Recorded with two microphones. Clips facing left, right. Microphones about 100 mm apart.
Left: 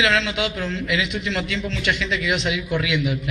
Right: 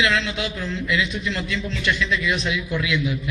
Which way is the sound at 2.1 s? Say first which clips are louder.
Left 1 dB; 90° left.